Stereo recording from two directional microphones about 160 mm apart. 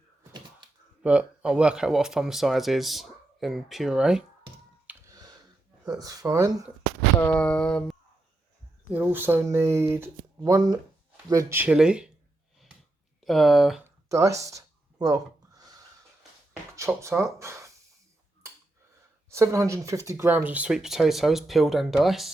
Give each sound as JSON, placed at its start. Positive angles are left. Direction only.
{"t": 1.0, "sound": "speech", "side_deg": -5}
{"t": 5.1, "sound": "a sound", "side_deg": -25}
{"t": 6.0, "sound": "speech", "side_deg": -20}
{"t": 7.2, "sound": "a sound", "side_deg": 10}
{"t": 8.9, "sound": "speech", "side_deg": -10}
{"t": 13.2, "sound": "speech", "side_deg": 0}
{"t": 13.8, "sound": "a sound", "side_deg": -20}
{"t": 16.7, "sound": "speech", "side_deg": -20}
{"t": 19.3, "sound": "speech", "side_deg": -20}